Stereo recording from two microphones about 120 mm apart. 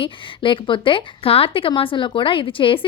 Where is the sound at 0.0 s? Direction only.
45° left (ahead or behind).